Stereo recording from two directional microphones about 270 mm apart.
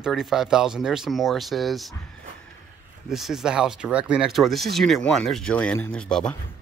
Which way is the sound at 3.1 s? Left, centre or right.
Centre.